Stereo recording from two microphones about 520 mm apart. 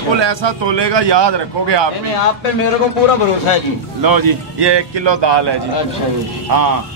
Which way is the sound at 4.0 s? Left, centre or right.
Right.